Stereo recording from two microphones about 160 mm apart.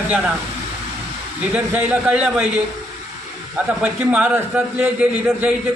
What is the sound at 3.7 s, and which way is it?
A man's voice, 10° right (ahead or behind).